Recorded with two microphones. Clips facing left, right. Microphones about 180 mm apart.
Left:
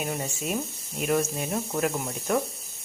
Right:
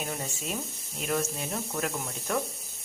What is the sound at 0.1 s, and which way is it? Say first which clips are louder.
Speech: left 5 dB; 15° left (ahead or behind).